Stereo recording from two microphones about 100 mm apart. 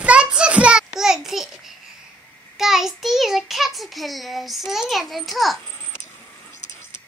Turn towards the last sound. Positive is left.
turn(degrees=0)  # may be behind; listen again after turning